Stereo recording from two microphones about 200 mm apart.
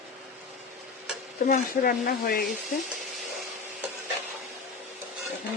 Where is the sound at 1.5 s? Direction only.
45° left (ahead or behind).